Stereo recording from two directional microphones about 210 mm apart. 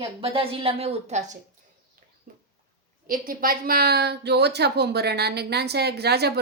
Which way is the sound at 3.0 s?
40° right (ahead or behind).